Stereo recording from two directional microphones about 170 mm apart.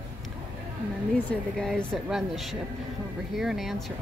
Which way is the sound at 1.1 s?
5° left (ahead or behind).